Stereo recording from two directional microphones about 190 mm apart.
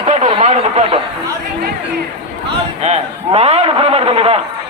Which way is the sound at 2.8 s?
35° right (ahead or behind).